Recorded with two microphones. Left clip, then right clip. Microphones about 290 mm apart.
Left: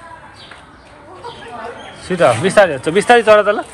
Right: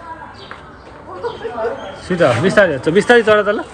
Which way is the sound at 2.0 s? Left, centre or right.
Centre.